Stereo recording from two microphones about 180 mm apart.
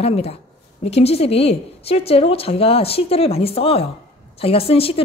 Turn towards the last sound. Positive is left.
turn(degrees=30)  # may be behind; listen again after turning